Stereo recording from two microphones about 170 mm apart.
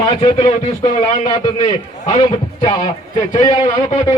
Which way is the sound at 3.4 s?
30° left (ahead or behind).